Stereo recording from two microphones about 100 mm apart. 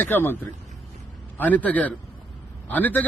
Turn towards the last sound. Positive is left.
turn(degrees=15)  # may be behind; listen again after turning